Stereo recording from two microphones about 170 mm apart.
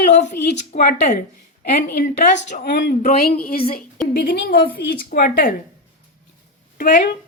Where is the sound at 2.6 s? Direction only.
75° left (ahead or behind).